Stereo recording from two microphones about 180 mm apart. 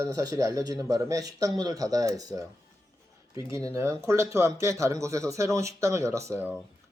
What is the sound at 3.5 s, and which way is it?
Speech, 20° right (ahead or behind).